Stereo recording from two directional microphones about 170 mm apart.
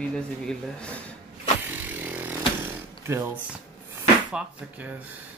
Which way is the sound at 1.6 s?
10° right (ahead or behind).